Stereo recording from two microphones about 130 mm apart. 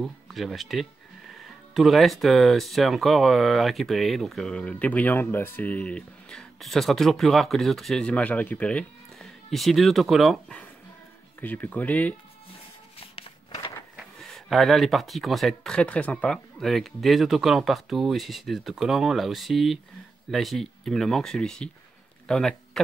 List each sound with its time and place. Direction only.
0.0 s speech: centre (ahead or behind)
11.4 s speech: 10° left (ahead or behind)
13.0 s walk: 45° left (ahead or behind)
13.9 s speech: centre (ahead or behind)